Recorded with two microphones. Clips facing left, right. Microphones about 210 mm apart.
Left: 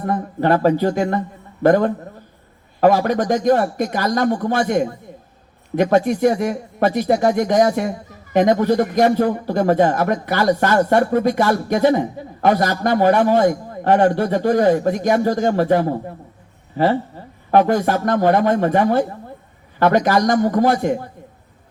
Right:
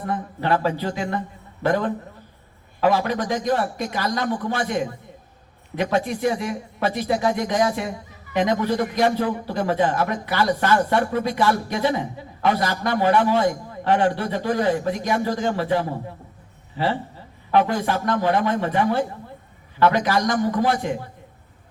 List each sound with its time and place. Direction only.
0.0 s speech: 45° left (ahead or behind)